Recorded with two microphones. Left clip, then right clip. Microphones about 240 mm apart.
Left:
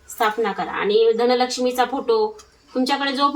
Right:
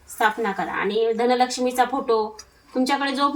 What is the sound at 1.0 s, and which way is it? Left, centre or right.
Speech, centre.